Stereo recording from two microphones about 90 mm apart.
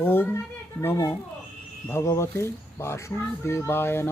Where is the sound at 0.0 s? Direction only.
20° left (ahead or behind).